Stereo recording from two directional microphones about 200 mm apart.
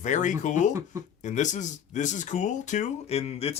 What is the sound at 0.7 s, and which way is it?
Speech, 15° right (ahead or behind).